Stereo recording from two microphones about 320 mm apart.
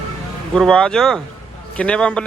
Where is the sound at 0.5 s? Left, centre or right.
Centre.